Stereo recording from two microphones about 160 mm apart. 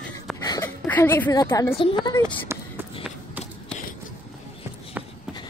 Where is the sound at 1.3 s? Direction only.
25° left (ahead or behind).